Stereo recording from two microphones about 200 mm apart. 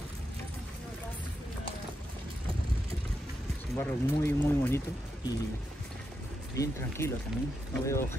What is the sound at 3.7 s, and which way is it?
Speech, 10° left (ahead or behind).